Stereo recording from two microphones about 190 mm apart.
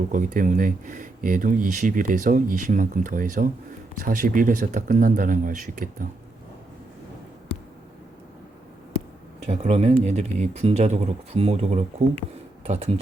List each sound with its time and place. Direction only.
0.1 s speech: 45° right (ahead or behind)
9.5 s speech: 35° right (ahead or behind)